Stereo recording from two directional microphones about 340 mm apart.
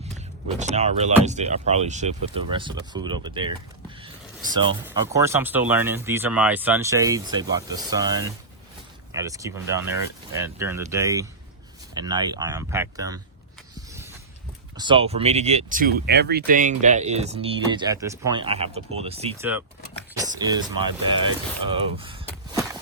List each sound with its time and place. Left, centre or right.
0.6 s speech: centre
4.5 s speech: centre
14.8 s speech: centre
19.4 s speech: centre